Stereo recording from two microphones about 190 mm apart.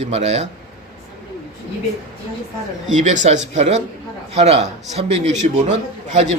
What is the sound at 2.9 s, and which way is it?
A man's voice, 40° right (ahead or behind).